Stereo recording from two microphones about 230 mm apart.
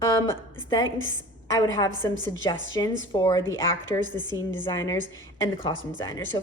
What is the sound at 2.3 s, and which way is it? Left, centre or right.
Speech, left.